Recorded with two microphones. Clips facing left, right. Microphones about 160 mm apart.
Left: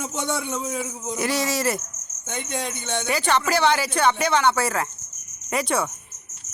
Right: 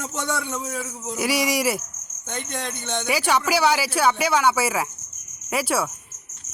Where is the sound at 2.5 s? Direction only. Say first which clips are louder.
Left 2 dB; 10° left (ahead or behind).